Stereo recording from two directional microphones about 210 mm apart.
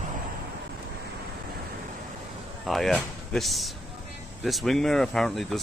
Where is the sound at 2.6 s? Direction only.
Centre (ahead or behind).